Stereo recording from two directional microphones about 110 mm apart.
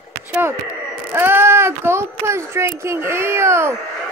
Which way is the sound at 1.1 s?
20° right (ahead or behind).